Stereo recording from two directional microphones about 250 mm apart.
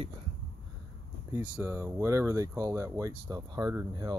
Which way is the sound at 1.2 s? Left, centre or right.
Centre.